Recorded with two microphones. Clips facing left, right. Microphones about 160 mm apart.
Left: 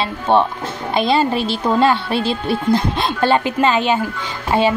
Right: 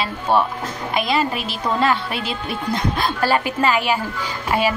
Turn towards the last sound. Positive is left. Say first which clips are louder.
# left 3 dB
turn(degrees=25)  # may be behind; listen again after turning